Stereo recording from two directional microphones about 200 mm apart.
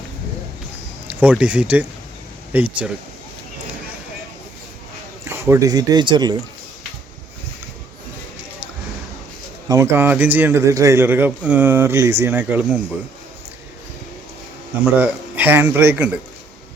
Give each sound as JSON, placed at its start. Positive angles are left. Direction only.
{"t": 1.0, "sound": "a man's voice", "side_deg": -5}
{"t": 5.2, "sound": "speech", "side_deg": -10}
{"t": 9.6, "sound": "a man's voice", "side_deg": -15}
{"t": 14.9, "sound": "a man's voice", "side_deg": -10}